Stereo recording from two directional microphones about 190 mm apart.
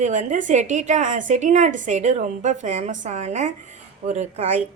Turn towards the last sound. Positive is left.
turn(degrees=-40)  # may be behind; listen again after turning